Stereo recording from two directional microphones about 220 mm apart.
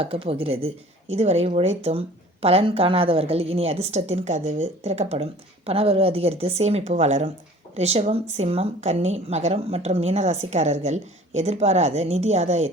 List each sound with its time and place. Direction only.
0.0 s speech: 25° right (ahead or behind)